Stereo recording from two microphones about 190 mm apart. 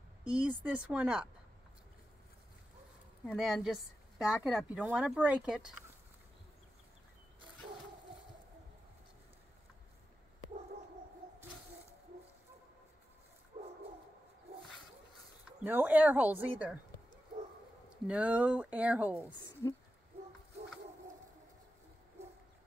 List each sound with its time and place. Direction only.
0.2 s speech: 5° right (ahead or behind)
3.3 s speech: centre (ahead or behind)
13.5 s bow-wow: 30° right (ahead or behind)
15.6 s speech: 10° right (ahead or behind)
18.0 s speech: 5° right (ahead or behind)